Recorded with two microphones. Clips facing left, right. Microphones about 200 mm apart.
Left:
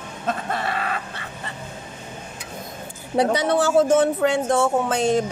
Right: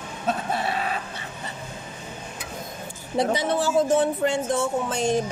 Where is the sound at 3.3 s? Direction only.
70° left (ahead or behind).